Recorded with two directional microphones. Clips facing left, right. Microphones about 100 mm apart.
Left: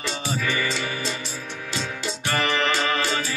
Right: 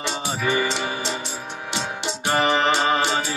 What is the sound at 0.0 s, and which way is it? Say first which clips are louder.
Music: right 2 dB; 25° right (ahead or behind).